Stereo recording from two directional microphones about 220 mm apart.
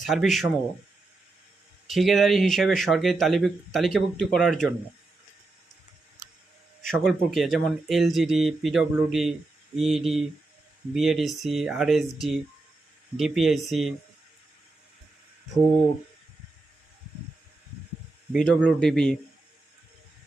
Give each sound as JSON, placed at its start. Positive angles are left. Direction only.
{"t": 0.0, "sound": "speech", "side_deg": 0}
{"t": 1.9, "sound": "speech", "side_deg": 0}
{"t": 6.8, "sound": "speech", "side_deg": 0}
{"t": 18.3, "sound": "speech", "side_deg": 0}